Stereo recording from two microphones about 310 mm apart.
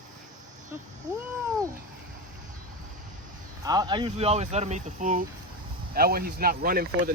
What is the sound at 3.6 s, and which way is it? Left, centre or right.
Speech, centre.